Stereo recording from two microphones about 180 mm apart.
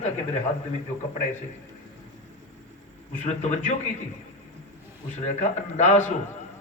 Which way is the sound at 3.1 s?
40° left (ahead or behind).